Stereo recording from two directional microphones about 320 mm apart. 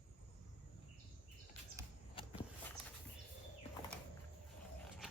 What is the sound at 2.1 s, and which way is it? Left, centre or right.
Walk, centre.